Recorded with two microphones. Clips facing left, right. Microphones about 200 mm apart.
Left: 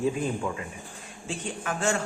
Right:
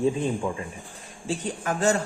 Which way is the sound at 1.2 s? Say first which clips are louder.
Right 4 dB; 35° right (ahead or behind).